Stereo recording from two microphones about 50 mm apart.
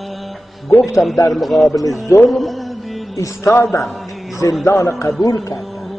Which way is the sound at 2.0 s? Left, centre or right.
Left.